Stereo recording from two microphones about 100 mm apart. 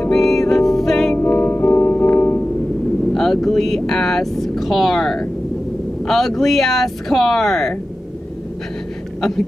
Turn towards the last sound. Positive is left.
turn(degrees=5)  # may be behind; listen again after turning